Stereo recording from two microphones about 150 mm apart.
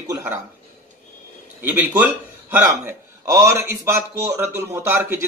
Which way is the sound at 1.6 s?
10° right (ahead or behind).